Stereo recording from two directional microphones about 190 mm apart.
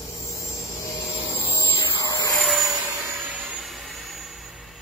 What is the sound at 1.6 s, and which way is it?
Vacuum cleaner, 20° left (ahead or behind).